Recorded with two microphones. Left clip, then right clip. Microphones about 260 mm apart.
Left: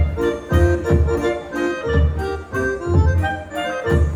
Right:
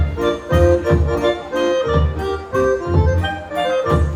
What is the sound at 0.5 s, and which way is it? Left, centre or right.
Music, left.